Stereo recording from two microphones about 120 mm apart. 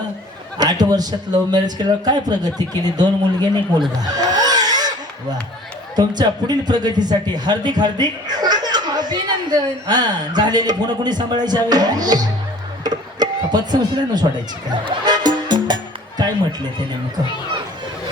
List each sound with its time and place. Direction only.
0.6 s speech: 35° right (ahead or behind)
4.0 s music: 35° right (ahead or behind)
6.0 s speech: 35° right (ahead or behind)
12.8 s a sound: 35° right (ahead or behind)
14.7 s music: 35° right (ahead or behind)